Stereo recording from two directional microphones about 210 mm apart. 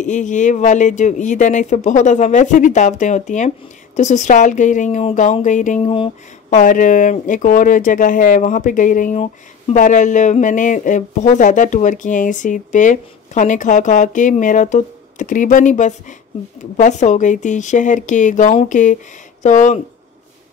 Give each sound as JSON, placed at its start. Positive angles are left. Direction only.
{"t": 0.0, "sound": "speech", "side_deg": 35}